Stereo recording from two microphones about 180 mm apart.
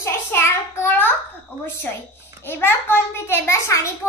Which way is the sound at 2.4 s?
10° left (ahead or behind).